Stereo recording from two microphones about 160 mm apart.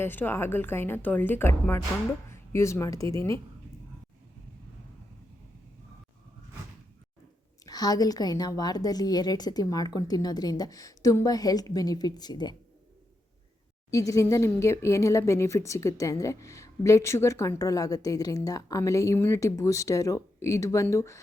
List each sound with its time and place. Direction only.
0.0 s a woman's voice: 15° left (ahead or behind)
7.6 s speech: 25° left (ahead or behind)
13.9 s speech: 20° left (ahead or behind)